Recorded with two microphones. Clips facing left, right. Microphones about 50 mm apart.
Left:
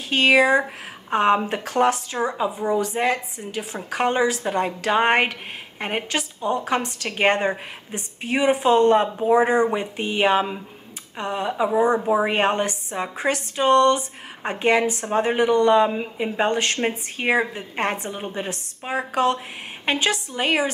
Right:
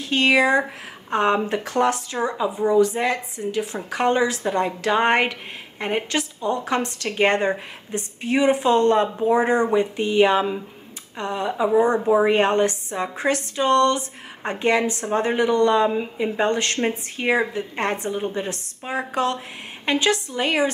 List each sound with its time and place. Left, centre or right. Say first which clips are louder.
0.1 s a woman's voice: left 1 dB; centre